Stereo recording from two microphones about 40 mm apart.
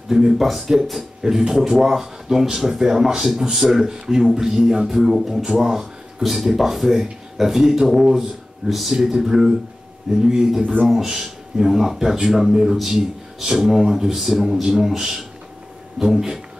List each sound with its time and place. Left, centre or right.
0.1 s speech: centre
0.4 s speech: centre
5.1 s speech: centre
5.4 s speech: centre
10.6 s speech: right
10.9 s speech: centre